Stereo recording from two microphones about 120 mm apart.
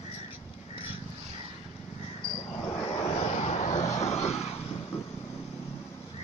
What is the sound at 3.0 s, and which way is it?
Vehicle, 70° left (ahead or behind).